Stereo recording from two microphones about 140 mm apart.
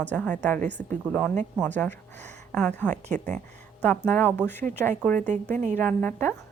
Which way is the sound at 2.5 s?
10° left (ahead or behind).